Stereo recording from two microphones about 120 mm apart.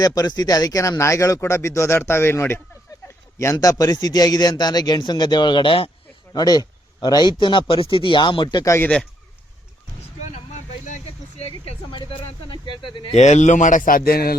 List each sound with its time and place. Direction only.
0.0 s a man's voice: 30° left (ahead or behind)
6.3 s a man's voice: 30° left (ahead or behind)
10.2 s vehicle: 80° left
12.5 s speech: 40° left (ahead or behind)
13.1 s a man's voice: 75° left (ahead or behind); by 13.8 s 90° left